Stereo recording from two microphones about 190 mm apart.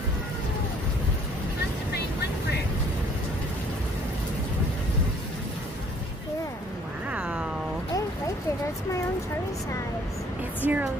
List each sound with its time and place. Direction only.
7.1 s cat: 5° right (ahead or behind)
10.6 s speech: 10° right (ahead or behind)